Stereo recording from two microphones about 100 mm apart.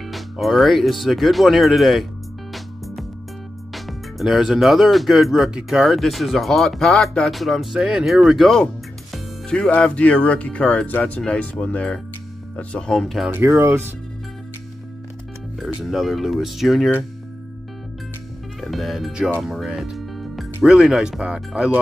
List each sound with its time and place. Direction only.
0.0 s speech: centre (ahead or behind)
3.7 s speech: centre (ahead or behind)
9.1 s music: 5° left (ahead or behind)
9.7 s speech: 10° left (ahead or behind)
13.6 s speech: 20° right (ahead or behind)
15.6 s speech: centre (ahead or behind)
18.6 s speech: centre (ahead or behind)